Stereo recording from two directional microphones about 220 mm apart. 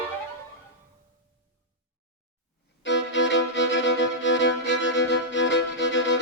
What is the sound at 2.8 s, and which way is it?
Violin, 55° left (ahead or behind).